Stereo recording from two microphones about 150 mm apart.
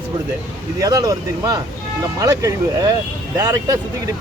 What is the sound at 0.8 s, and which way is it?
Speech, 25° right (ahead or behind).